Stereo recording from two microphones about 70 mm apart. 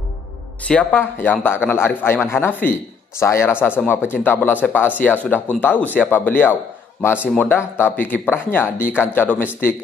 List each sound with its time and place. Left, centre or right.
0.9 s speech: left